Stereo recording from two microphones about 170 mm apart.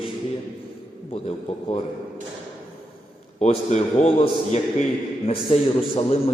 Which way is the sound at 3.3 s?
40° left (ahead or behind).